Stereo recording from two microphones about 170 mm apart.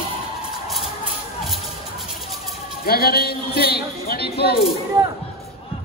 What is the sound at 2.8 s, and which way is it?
A man's voice, 65° left (ahead or behind).